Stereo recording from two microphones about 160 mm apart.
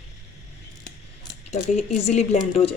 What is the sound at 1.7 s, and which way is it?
Speech, 45° left (ahead or behind).